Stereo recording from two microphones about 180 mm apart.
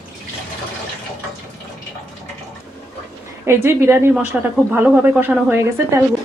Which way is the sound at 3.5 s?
15° right (ahead or behind).